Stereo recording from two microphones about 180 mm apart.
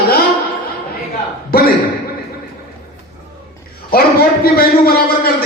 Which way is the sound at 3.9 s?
55° left (ahead or behind).